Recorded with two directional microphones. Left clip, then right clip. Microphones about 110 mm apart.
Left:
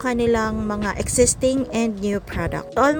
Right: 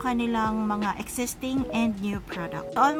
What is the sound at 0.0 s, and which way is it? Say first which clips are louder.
A woman's voice: left 7 dB; 40° left (ahead or behind).